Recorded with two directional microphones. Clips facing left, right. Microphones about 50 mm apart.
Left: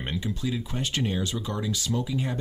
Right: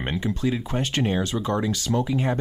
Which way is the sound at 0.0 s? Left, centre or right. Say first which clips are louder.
Right 5 dB; right.